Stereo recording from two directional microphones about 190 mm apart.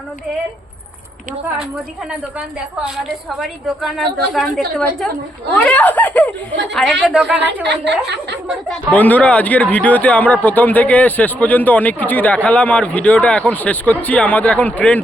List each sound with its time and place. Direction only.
2.8 s a woman's voice: centre (ahead or behind)
7.3 s a woman's voice: 65° right (ahead or behind)
8.4 s speech: centre (ahead or behind)